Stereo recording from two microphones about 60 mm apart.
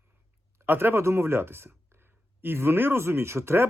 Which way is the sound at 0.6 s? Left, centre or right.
Right.